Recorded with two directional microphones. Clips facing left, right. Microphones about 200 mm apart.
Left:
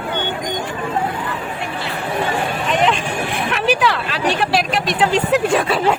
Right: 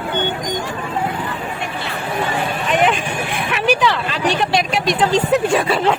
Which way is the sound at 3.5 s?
Centre (ahead or behind).